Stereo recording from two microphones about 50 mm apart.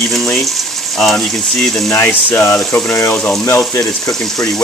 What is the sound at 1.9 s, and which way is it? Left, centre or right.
Speech, left.